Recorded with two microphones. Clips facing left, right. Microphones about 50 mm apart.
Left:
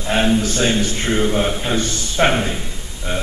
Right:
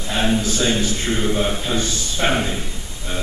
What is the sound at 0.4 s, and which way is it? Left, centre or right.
A man's voice, left.